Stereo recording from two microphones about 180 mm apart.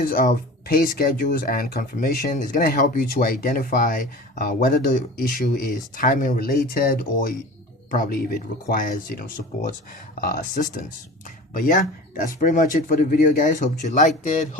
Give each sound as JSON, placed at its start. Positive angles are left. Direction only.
{"t": 0.0, "sound": "speech", "side_deg": 50}